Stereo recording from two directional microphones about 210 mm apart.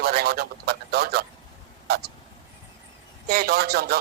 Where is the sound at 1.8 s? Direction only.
50° right (ahead or behind).